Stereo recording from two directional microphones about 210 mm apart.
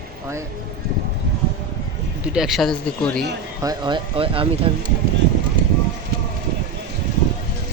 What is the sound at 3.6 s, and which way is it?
Speech, 20° right (ahead or behind).